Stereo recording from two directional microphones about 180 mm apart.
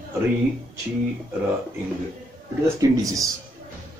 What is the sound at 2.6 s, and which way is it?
Speech, 20° right (ahead or behind).